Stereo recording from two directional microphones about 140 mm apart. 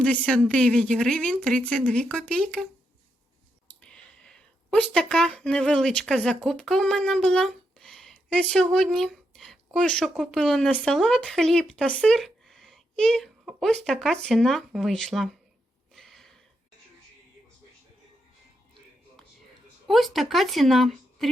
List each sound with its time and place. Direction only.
0.0 s a woman's voice: 10° left (ahead or behind)
3.8 s speech: 5° left (ahead or behind)
16.0 s a sound: centre (ahead or behind)
19.9 s speech: centre (ahead or behind)